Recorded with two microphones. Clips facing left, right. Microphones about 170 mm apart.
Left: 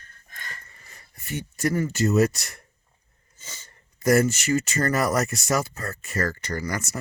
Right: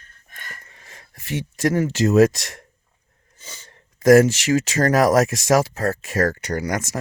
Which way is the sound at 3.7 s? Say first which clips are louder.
Right 8 dB; 90° right.